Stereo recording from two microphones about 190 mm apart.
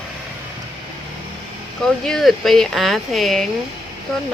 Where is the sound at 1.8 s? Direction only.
Centre (ahead or behind).